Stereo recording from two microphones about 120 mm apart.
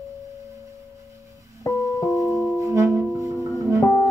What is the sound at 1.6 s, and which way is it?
Music, 25° left (ahead or behind).